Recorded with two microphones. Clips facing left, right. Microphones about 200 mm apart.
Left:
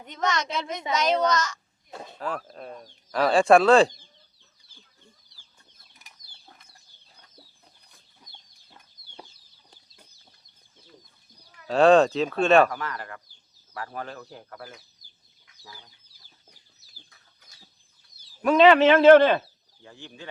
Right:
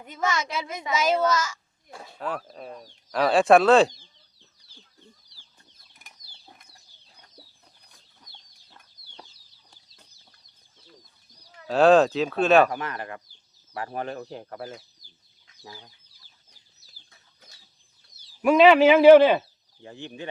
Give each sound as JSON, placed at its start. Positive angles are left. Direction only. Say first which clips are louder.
{"t": 0.0, "sound": "speech", "louder": "even", "side_deg": -5}
{"t": 1.9, "sound": "speech", "louder": "left 3 dB", "side_deg": 20}
{"t": 2.1, "sound": "speech", "louder": "right 1 dB", "side_deg": 0}
{"t": 6.0, "sound": "bird flight", "louder": "right 2 dB", "side_deg": -50}
{"t": 11.7, "sound": "speech", "louder": "even", "side_deg": 0}
{"t": 12.7, "sound": "speech", "louder": "right 2 dB", "side_deg": -20}
{"t": 18.4, "sound": "speech", "louder": "right 1 dB", "side_deg": -5}